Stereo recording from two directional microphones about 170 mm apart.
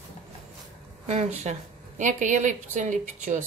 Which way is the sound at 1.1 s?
40° right (ahead or behind).